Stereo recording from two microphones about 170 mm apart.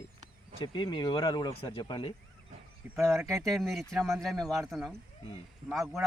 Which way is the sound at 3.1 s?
Centre (ahead or behind).